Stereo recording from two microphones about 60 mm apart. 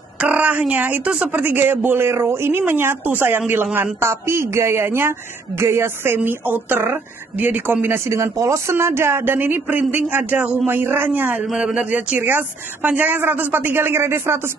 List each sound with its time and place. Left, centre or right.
0.2 s a sound: right
1.3 s a woman's voice: right
6.1 s a man's voice: right
11.5 s a man's voice: centre
12.2 s speech: right